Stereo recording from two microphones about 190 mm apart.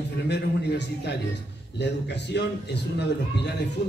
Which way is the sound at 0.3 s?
60° left (ahead or behind).